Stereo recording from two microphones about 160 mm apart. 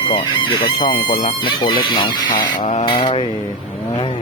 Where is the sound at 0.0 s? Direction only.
30° left (ahead or behind).